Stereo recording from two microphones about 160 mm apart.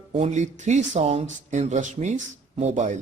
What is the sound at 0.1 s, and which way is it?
Speech, 45° right (ahead or behind).